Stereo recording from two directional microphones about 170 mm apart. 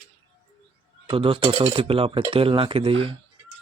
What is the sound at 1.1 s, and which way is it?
Speech, 30° right (ahead or behind).